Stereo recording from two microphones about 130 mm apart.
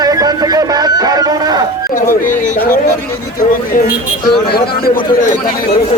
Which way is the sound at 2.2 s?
90° left.